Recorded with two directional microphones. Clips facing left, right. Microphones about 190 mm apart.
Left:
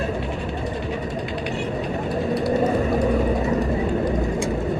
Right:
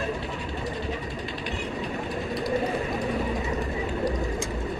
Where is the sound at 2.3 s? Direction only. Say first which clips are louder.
Left 6 dB; 40° left (ahead or behind).